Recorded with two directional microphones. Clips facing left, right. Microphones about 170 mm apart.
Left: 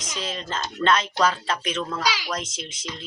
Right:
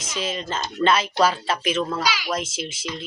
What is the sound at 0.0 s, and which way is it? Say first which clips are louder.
Speech: right 4 dB; 5° right (ahead or behind).